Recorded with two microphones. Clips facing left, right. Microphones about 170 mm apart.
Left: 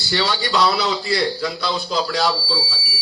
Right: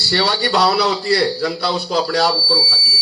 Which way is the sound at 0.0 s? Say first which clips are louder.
Right 3 dB; 65° right (ahead or behind).